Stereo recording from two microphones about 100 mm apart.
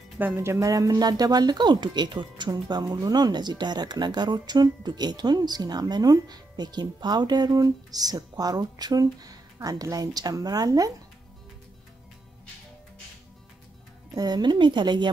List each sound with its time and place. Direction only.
0.4 s speech: 30° right (ahead or behind)
14.1 s speech: 40° right (ahead or behind)